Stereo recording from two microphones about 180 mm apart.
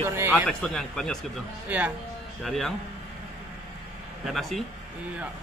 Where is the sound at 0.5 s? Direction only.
5° left (ahead or behind).